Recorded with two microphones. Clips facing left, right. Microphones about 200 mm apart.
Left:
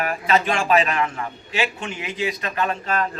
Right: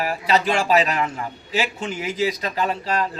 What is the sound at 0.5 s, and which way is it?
A man's voice, 35° right (ahead or behind).